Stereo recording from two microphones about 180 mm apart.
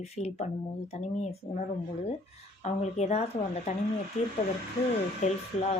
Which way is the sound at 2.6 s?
40° left (ahead or behind).